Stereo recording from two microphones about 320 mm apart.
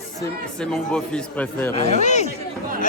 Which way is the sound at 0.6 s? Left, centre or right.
Centre.